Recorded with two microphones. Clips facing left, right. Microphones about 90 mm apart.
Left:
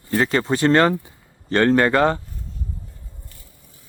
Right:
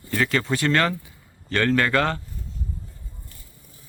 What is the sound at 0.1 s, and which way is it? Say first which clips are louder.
Speech: left 4 dB; 30° left (ahead or behind).